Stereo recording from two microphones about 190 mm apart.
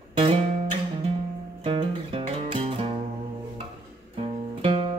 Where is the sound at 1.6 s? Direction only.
30° right (ahead or behind).